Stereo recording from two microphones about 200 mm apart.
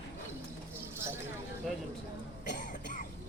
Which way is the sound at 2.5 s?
40° left (ahead or behind).